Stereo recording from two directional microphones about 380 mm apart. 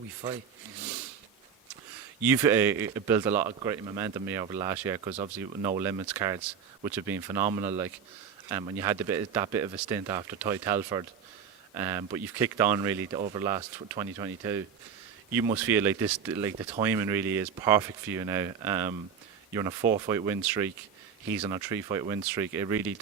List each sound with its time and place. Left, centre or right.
2.2 s speech: centre